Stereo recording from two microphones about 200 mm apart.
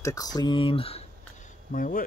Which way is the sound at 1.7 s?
45° left (ahead or behind).